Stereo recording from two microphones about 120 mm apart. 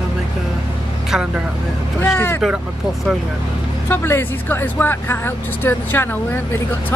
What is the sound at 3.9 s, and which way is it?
Speech, 20° left (ahead or behind).